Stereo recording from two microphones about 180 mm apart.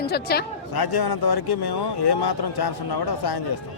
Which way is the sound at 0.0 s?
60° left (ahead or behind).